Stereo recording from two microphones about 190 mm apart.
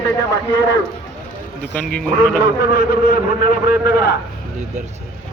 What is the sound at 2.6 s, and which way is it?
A man's voice, 50° left (ahead or behind).